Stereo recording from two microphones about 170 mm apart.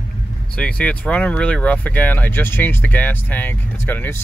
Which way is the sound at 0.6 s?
5° left (ahead or behind).